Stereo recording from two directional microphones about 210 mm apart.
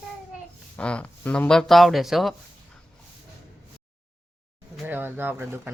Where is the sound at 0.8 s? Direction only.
5° left (ahead or behind).